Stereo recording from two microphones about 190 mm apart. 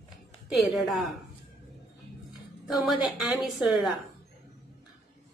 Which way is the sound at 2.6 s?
Centre (ahead or behind).